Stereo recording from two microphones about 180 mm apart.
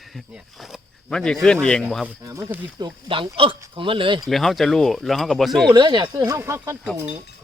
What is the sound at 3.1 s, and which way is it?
Speech, 30° right (ahead or behind).